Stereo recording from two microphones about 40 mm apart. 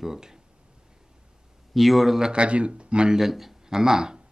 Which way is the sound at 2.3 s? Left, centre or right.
Right.